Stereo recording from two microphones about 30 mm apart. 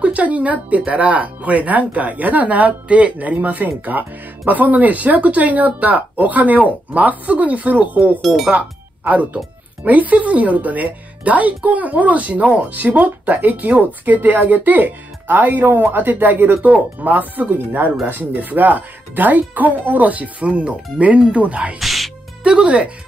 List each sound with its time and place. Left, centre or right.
0.0 s speech: right
8.2 s speech: centre
9.0 s speech: right
15.3 s speech: right
18.0 s speech: right
21.7 s speech: centre
22.4 s speech: right